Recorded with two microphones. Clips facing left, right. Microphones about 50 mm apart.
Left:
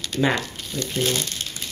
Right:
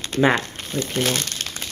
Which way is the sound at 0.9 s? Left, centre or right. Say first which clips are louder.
Even; right.